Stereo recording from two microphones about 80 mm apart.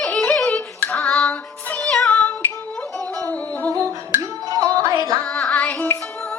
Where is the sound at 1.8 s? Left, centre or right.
Centre.